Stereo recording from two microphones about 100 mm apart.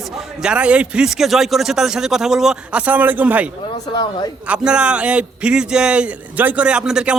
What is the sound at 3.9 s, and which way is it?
Speech, 50° left (ahead or behind).